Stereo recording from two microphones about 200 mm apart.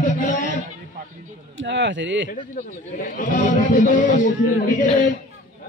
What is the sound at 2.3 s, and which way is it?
A man's voice, 40° left (ahead or behind).